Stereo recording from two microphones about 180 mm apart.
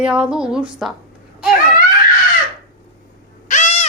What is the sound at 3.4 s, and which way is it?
Owl, 40° left (ahead or behind).